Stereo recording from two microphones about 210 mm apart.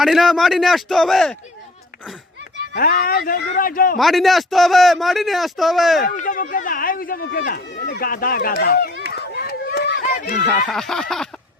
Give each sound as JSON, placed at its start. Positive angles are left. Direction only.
{"t": 0.0, "sound": "a man's voice", "side_deg": 0}
{"t": 2.7, "sound": "a man's voice", "side_deg": 45}
{"t": 3.9, "sound": "a man's voice", "side_deg": 0}
{"t": 6.1, "sound": "speech", "side_deg": 40}
{"t": 10.2, "sound": "speech", "side_deg": 35}
{"t": 10.7, "sound": "a man's voice", "side_deg": 0}